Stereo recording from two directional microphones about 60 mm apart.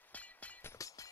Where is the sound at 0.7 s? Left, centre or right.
Left.